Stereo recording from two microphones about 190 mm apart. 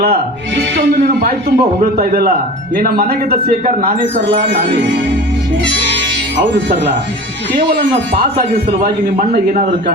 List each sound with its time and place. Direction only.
0.0 s a man's voice: 60° right (ahead or behind)
8.8 s a man's voice: 55° right (ahead or behind)